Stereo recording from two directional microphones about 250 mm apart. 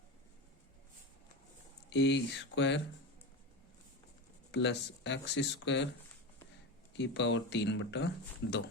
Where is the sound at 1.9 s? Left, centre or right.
Left.